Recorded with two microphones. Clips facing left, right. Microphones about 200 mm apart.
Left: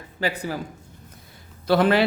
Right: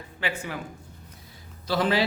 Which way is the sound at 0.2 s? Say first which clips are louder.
Left 5 dB; 40° left (ahead or behind).